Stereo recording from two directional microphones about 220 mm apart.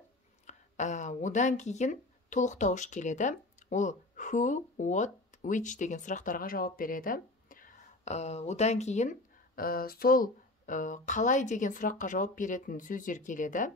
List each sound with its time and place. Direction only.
0.5 s speech: 35° left (ahead or behind)
9.6 s speech: 45° left (ahead or behind)